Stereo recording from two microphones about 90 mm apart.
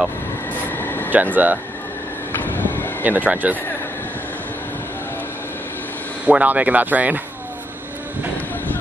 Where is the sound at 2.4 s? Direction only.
20° left (ahead or behind).